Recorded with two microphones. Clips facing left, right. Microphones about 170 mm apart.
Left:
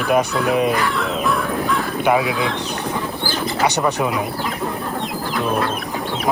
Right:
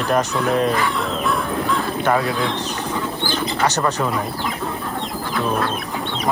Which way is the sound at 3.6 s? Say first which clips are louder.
Left 2 dB; 15° left (ahead or behind).